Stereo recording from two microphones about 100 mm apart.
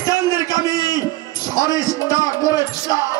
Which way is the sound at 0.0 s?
35° left (ahead or behind).